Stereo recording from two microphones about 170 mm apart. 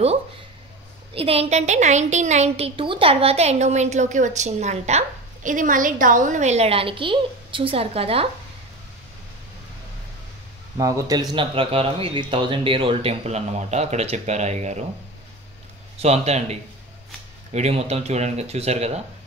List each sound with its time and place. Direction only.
1.1 s a woman's voice: 35° right (ahead or behind)
10.8 s speech: 20° right (ahead or behind)
11.3 s a woman's voice: 35° right (ahead or behind)
16.0 s a woman's voice: 40° right (ahead or behind)